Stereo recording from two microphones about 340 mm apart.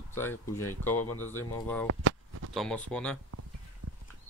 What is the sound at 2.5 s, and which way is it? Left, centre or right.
Speech, centre.